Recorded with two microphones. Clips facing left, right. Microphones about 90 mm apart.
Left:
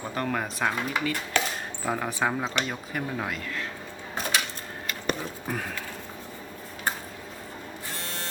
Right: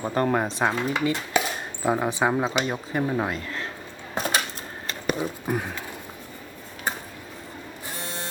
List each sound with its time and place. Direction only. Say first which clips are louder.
0.1 s speech: right 6 dB; 35° right (ahead or behind)
1.3 s chopping: right 2 dB; 10° right (ahead or behind)
1.8 s speech: right 5 dB; 20° right (ahead or behind)
4.1 s dishes: right 3 dB; 40° right (ahead or behind)
5.0 s speech: right 5 dB; 15° right (ahead or behind)
7.9 s printer: right 4 dB; 15° right (ahead or behind)